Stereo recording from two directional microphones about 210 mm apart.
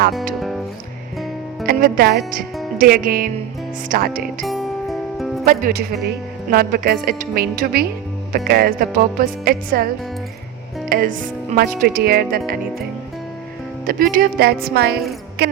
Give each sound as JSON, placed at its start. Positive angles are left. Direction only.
{"t": 1.6, "sound": "speech", "side_deg": -45}
{"t": 4.4, "sound": "music", "side_deg": 0}
{"t": 5.5, "sound": "speech", "side_deg": -45}
{"t": 13.8, "sound": "speech", "side_deg": -40}